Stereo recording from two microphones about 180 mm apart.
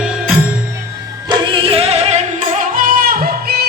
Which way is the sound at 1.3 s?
30° right (ahead or behind).